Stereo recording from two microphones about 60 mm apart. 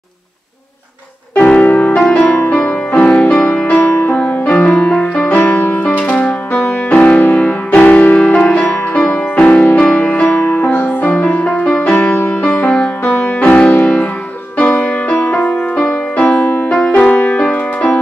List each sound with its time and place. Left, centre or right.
1.3 s music: left
3.8 s music: left
7.0 s music: left
11.6 s music: centre
11.9 s music: left
12.6 s music: centre